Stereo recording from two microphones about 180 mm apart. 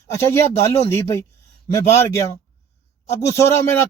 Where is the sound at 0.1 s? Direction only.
20° left (ahead or behind).